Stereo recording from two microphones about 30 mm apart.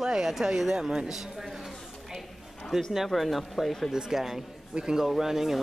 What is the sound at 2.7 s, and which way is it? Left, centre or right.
Speech, centre.